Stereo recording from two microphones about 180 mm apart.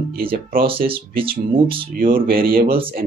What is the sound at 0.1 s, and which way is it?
Speech, 55° right (ahead or behind).